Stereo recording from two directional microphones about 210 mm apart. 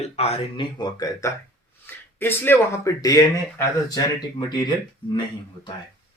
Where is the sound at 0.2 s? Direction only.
30° left (ahead or behind).